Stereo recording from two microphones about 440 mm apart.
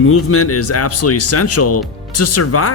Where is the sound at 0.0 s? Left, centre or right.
Left.